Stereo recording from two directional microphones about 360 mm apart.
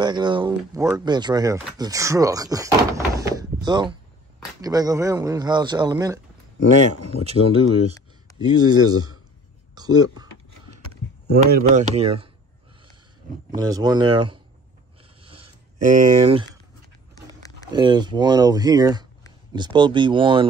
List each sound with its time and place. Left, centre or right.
0.0 s speech: centre
8.4 s speech: centre
9.8 s typing: centre
11.2 s speech: right
13.5 s speech: centre
15.8 s speech: right
17.7 s speech: centre